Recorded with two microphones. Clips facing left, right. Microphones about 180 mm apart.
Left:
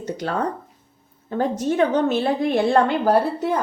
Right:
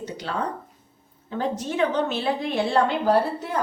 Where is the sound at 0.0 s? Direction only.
45° left (ahead or behind).